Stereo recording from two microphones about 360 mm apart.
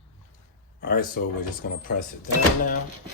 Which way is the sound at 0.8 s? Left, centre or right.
Left.